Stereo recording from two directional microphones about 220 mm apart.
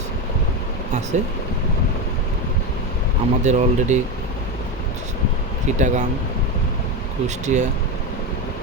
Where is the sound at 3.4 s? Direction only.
30° right (ahead or behind).